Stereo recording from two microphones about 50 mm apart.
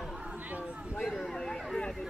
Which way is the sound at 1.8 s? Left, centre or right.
Centre.